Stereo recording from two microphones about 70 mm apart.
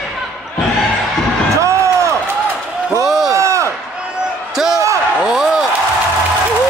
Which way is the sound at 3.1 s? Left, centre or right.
Centre.